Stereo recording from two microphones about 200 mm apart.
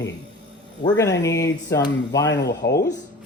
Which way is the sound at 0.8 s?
20° left (ahead or behind).